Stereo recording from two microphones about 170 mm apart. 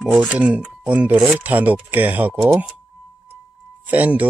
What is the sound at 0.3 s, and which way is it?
Speech, 10° right (ahead or behind).